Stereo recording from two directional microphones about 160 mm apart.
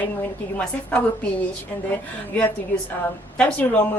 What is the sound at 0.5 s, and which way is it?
Speech, 10° left (ahead or behind).